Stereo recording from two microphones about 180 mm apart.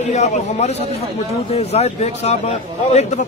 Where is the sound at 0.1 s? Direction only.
40° left (ahead or behind).